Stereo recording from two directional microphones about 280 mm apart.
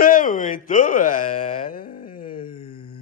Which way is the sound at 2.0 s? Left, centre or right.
Left.